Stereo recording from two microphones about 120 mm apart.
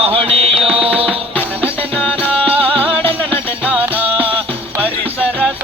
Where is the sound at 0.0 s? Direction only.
55° right (ahead or behind).